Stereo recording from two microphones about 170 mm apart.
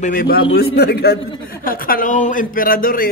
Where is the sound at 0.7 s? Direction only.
75° left (ahead or behind).